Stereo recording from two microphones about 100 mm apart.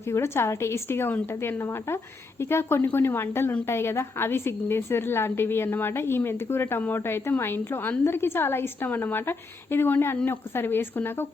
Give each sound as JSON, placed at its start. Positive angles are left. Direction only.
{"t": 0.1, "sound": "a woman's voice", "side_deg": 25}